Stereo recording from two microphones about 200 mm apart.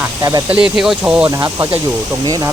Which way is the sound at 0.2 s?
15° right (ahead or behind).